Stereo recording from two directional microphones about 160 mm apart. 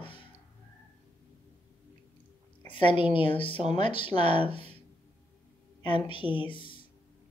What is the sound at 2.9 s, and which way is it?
Speech, 30° left (ahead or behind).